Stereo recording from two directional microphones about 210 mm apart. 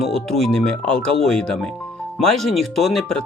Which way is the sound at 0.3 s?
Centre (ahead or behind).